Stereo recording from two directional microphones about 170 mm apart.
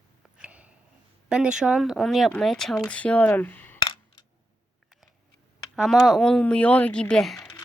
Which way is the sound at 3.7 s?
30° left (ahead or behind).